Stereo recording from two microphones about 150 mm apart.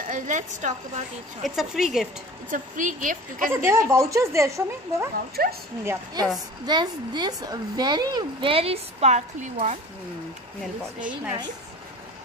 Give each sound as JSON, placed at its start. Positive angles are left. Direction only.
{"t": 0.1, "sound": "a woman's voice", "side_deg": -55}
{"t": 1.4, "sound": "a woman's voice", "side_deg": 0}
{"t": 2.5, "sound": "a woman's voice", "side_deg": -60}
{"t": 3.5, "sound": "speech", "side_deg": -20}
{"t": 5.3, "sound": "speech", "side_deg": -90}
{"t": 6.6, "sound": "speech", "side_deg": -30}
{"t": 10.6, "sound": "speech", "side_deg": -10}